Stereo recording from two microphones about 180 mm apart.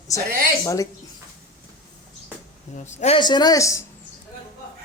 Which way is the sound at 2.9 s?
40° left (ahead or behind).